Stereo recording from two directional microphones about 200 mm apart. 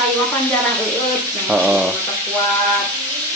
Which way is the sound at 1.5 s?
5° right (ahead or behind).